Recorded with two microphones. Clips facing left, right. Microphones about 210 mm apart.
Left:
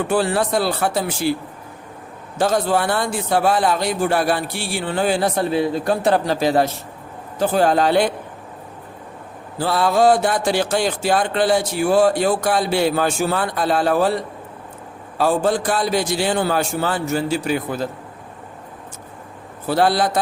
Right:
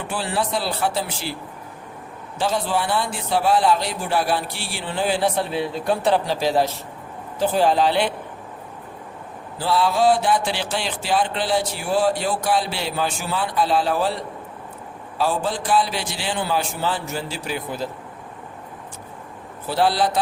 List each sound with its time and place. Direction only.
0.1 s speech: 45° left (ahead or behind)
2.4 s speech: 45° left (ahead or behind)
9.6 s speech: 50° left (ahead or behind)
15.2 s speech: 50° left (ahead or behind)
19.6 s speech: 50° left (ahead or behind)